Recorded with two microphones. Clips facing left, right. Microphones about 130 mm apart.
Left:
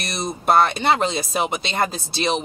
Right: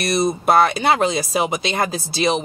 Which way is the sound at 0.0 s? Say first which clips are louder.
Right 7 dB; centre (ahead or behind).